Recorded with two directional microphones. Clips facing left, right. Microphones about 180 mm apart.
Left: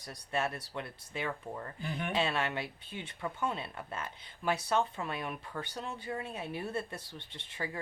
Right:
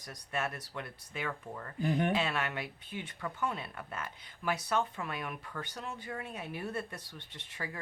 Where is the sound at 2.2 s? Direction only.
30° left (ahead or behind).